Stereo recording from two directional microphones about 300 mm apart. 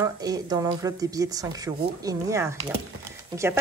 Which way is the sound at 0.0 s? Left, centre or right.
Centre.